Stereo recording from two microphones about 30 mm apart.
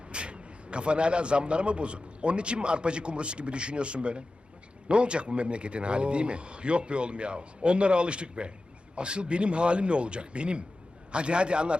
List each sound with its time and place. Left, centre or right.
0.1 s a man's voice: right